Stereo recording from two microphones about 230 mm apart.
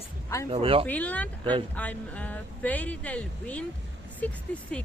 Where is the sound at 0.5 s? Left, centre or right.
Right.